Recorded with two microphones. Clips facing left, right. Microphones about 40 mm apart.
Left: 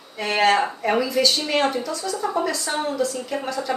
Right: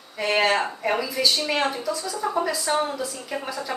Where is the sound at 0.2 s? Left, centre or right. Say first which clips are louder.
Left 2 dB; centre.